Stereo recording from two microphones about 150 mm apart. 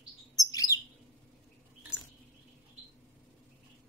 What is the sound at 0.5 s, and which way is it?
Chirp, 20° left (ahead or behind).